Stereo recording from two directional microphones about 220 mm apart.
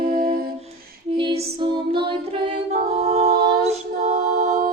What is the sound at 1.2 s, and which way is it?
Music, 25° right (ahead or behind).